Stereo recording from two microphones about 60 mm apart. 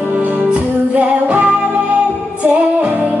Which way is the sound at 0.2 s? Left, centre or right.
Right.